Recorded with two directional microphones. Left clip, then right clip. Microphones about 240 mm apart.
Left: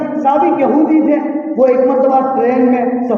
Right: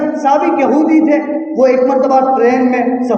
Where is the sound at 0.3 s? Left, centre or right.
Right.